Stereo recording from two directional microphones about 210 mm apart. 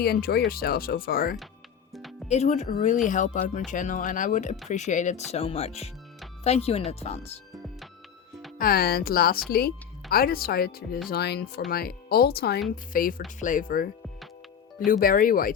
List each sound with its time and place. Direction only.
0.0 s speech: 45° left (ahead or behind)
1.9 s music: centre (ahead or behind)
2.2 s speech: 30° left (ahead or behind)
8.5 s speech: 45° left (ahead or behind)
14.8 s speech: 40° left (ahead or behind)